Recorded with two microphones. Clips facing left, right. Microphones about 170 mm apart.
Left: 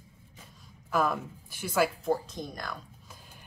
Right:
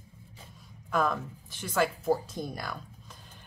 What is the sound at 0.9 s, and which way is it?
Speech, 5° left (ahead or behind).